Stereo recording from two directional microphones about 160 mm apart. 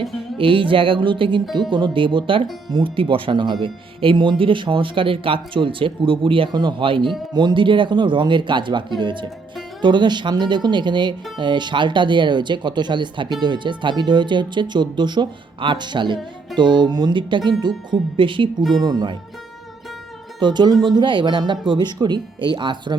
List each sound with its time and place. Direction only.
0.3 s speech: 35° right (ahead or behind)
20.4 s speech: 25° right (ahead or behind)